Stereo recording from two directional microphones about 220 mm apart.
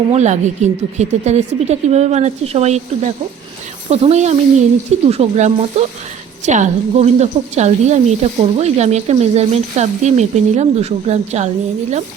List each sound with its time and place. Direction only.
0.1 s a woman's voice: 30° right (ahead or behind)